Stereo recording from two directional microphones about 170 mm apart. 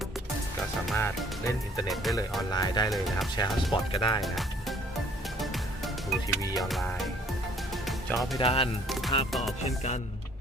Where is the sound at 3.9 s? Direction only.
30° left (ahead or behind).